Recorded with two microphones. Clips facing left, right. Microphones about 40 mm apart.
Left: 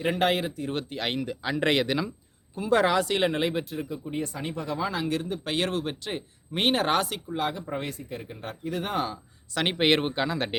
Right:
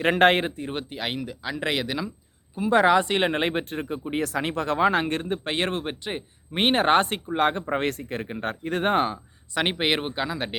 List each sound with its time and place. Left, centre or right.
0.0 s speech: right
0.6 s speech: centre
2.6 s speech: centre; by 9.1 s right
9.1 s a sound: centre
9.7 s speech: centre